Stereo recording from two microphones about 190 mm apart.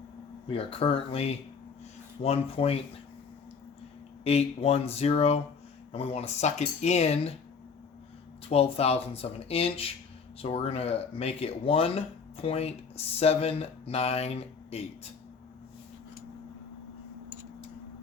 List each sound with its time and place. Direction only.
0.4 s speech: 30° left (ahead or behind)
4.2 s speech: 35° left (ahead or behind)
8.4 s speech: 30° left (ahead or behind)